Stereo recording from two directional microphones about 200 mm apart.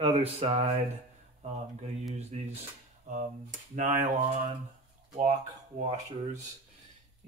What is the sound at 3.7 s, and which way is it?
Speech, 40° right (ahead or behind).